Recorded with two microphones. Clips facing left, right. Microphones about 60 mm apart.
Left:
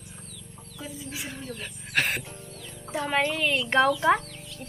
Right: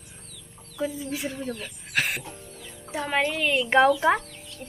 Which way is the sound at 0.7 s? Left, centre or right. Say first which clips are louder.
Right 9 dB; right.